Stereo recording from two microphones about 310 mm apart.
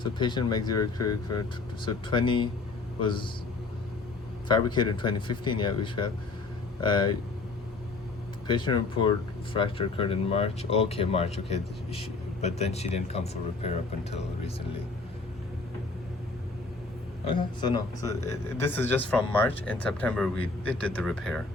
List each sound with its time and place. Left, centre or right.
0.0 s speech: centre
4.4 s speech: centre
8.4 s speech: centre
17.2 s speech: centre